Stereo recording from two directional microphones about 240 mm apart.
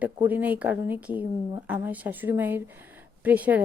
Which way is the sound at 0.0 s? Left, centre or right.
Centre.